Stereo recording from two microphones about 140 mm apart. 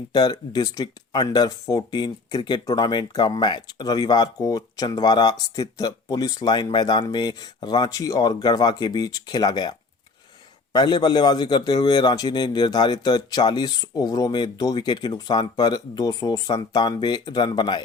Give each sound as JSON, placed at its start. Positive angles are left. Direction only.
{"t": 0.1, "sound": "a man's voice", "side_deg": 30}